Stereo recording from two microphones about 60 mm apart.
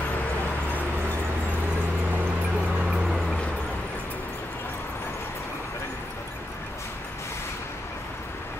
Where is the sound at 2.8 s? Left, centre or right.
Centre.